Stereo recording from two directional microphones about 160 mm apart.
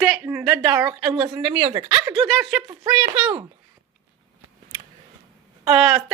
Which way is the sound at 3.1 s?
10° right (ahead or behind).